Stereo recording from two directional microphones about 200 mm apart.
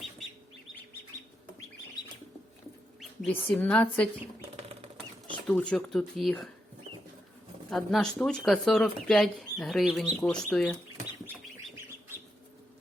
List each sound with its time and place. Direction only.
3.0 s bird: centre (ahead or behind)
3.3 s speech: 10° left (ahead or behind)
4.4 s a sound: 30° right (ahead or behind)
4.9 s speech: 5° left (ahead or behind)
7.7 s speech: centre (ahead or behind)